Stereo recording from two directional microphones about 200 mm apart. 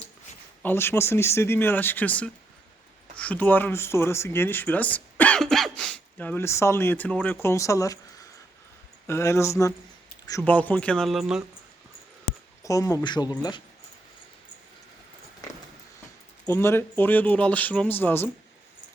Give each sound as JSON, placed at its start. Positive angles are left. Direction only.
{"t": 0.6, "sound": "speech", "side_deg": 10}
{"t": 9.0, "sound": "speech", "side_deg": 15}
{"t": 12.6, "sound": "speech", "side_deg": 15}
{"t": 16.5, "sound": "speech", "side_deg": 10}